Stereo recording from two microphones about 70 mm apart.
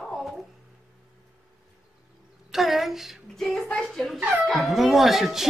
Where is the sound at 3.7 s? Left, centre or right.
Centre.